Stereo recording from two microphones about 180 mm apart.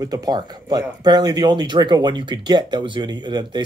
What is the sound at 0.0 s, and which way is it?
Speech, 20° right (ahead or behind).